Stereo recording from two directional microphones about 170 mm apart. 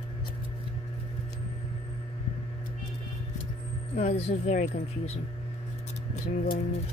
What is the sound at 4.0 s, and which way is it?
Speech, 40° left (ahead or behind).